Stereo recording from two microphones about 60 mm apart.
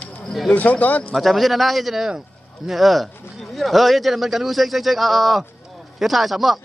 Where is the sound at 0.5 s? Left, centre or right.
Left.